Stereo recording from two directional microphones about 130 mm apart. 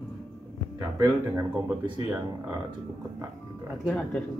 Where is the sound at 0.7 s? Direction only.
25° right (ahead or behind).